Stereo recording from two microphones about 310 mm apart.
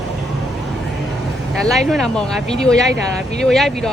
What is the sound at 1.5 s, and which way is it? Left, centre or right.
Speech, centre.